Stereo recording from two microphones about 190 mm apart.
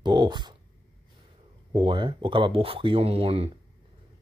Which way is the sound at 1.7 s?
25° right (ahead or behind).